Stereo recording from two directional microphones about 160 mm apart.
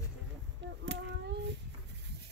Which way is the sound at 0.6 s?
90° right.